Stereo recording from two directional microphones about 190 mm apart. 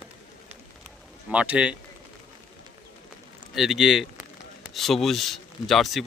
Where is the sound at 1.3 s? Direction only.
5° right (ahead or behind).